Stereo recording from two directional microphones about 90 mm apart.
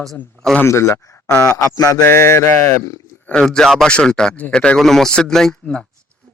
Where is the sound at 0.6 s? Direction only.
30° left (ahead or behind).